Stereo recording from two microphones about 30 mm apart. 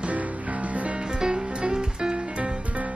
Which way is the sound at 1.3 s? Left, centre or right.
Right.